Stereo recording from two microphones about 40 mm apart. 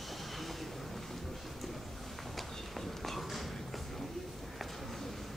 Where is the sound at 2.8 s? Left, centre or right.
Centre.